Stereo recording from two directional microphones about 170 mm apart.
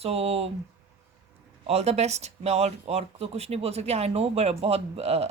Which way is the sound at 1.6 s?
40° right (ahead or behind).